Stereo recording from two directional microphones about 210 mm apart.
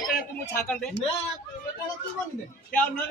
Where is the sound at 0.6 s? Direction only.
Centre (ahead or behind).